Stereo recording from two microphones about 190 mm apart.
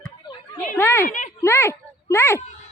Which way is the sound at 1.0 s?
40° left (ahead or behind).